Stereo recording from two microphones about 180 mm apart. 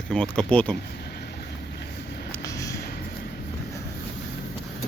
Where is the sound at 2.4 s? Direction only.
20° left (ahead or behind).